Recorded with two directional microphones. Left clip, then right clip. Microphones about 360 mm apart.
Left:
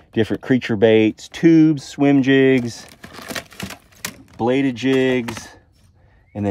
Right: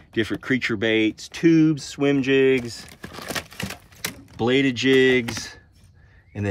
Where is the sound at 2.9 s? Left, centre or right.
Centre.